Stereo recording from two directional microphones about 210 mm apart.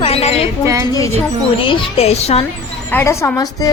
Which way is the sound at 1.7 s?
30° left (ahead or behind).